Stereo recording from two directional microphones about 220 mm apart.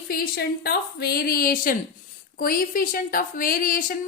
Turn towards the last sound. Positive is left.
turn(degrees=40)  # may be behind; listen again after turning